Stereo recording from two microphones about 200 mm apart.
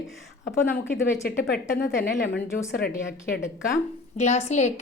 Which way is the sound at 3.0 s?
65° left (ahead or behind).